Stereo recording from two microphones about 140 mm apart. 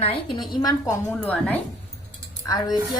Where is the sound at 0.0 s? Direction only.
40° left (ahead or behind).